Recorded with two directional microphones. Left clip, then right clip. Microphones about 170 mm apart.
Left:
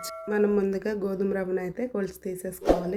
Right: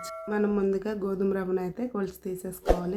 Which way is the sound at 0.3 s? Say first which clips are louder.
Left 3 dB; 10° left (ahead or behind).